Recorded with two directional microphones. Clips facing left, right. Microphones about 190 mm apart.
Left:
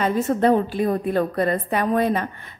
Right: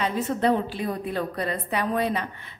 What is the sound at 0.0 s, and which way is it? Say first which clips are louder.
A woman's voice: left 5 dB; 50° left (ahead or behind).